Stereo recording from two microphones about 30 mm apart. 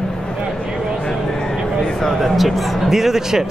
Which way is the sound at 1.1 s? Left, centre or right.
Centre.